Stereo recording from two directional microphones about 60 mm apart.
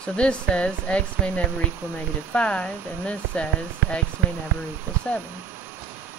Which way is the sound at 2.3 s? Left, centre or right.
Centre.